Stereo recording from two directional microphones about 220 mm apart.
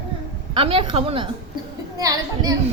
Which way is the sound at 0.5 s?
25° right (ahead or behind).